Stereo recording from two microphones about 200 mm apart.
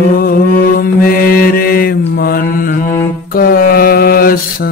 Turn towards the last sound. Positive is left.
turn(degrees=45)  # may be behind; listen again after turning